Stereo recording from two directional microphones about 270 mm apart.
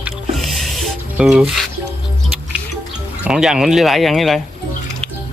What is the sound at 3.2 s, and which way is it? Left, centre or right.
Speech, centre.